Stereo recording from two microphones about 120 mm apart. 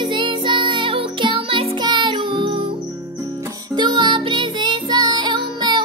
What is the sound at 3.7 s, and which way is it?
Music, 40° right (ahead or behind).